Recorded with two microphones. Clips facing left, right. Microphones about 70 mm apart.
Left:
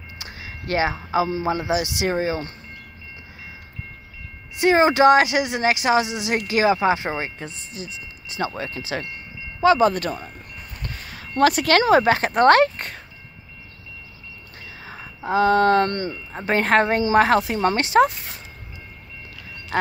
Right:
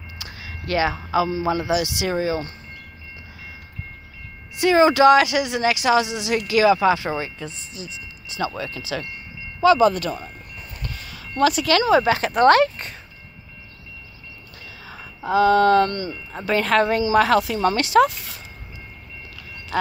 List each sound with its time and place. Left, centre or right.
0.2 s a sound: left
1.4 s a woman's voice: left
4.6 s a woman's voice: left
6.4 s a woman's voice: left
10.8 s a sound: left
11.3 s speech: left
14.8 s a woman's voice: left